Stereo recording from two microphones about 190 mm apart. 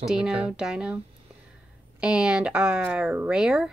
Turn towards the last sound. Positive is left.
turn(degrees=-5)  # may be behind; listen again after turning